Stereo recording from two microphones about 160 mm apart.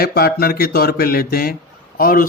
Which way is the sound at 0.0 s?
70° left (ahead or behind).